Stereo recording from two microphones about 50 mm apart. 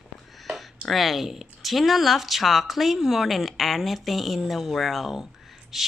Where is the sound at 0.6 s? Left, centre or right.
Centre.